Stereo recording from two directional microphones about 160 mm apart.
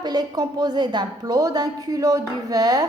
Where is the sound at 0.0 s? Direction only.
25° right (ahead or behind).